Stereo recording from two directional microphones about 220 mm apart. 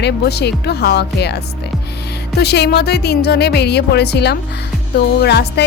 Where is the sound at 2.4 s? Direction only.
50° left (ahead or behind).